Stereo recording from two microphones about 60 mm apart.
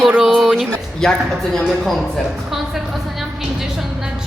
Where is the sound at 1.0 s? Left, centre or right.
Centre.